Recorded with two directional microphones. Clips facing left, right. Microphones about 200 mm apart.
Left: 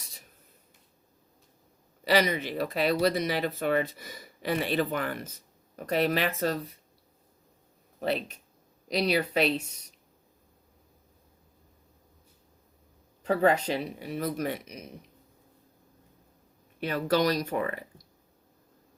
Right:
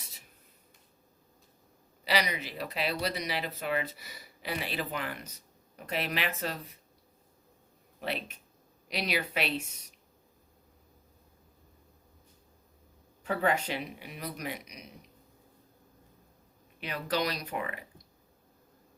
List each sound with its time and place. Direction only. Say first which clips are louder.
2.0 s speech: left 6 dB; 50° left (ahead or behind)
7.9 s speech: left 6 dB; 40° left (ahead or behind)
13.2 s speech: left 5 dB; 35° left (ahead or behind)
16.8 s speech: left 7 dB; 45° left (ahead or behind)